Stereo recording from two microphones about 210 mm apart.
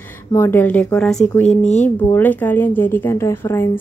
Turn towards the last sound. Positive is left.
turn(degrees=10)  # may be behind; listen again after turning